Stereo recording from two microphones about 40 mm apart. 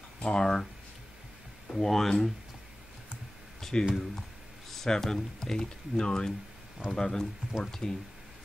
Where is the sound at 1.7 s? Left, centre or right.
Centre.